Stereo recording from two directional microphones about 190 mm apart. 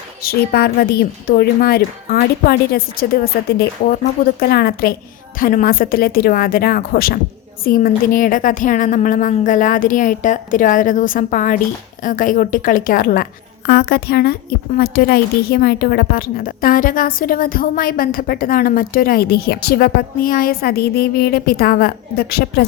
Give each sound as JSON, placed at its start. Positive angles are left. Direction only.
{"t": 0.2, "sound": "a woman's voice", "side_deg": 55}